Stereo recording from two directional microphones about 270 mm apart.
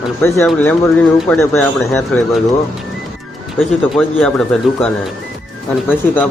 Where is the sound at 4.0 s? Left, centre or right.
Centre.